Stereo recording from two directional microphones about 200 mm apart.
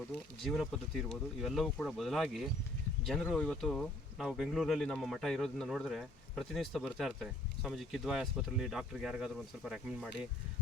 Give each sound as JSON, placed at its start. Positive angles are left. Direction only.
{"t": 0.4, "sound": "speech", "side_deg": 0}